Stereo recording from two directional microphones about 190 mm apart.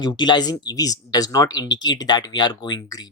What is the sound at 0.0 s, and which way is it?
Speech, 25° left (ahead or behind).